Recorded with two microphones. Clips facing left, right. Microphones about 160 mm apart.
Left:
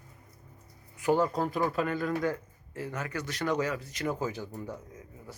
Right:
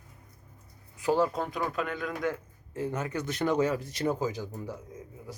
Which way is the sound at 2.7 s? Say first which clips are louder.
Right 4 dB; 20° right (ahead or behind).